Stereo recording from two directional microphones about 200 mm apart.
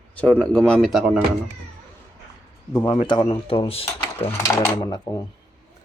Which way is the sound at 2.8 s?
25° left (ahead or behind).